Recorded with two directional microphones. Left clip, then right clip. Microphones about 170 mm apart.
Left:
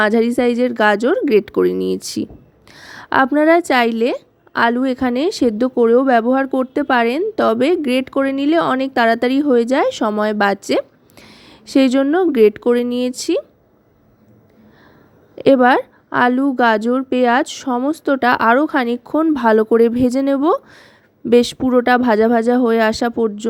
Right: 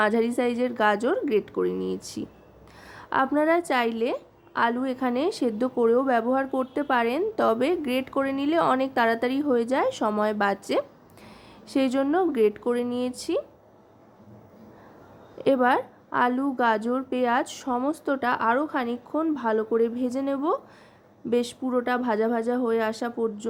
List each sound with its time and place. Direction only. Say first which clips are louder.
0.0 s a woman's voice: left 8 dB; 40° left (ahead or behind)
15.4 s a woman's voice: left 10 dB; 45° left (ahead or behind)